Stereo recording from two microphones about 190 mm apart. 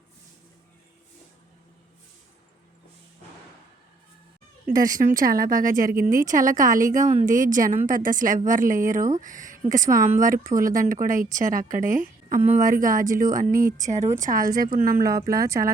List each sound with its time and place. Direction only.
4.6 s speech: 45° right (ahead or behind)
15.3 s speech: 15° right (ahead or behind)